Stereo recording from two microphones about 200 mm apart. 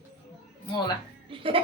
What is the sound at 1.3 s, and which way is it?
Music, 25° right (ahead or behind).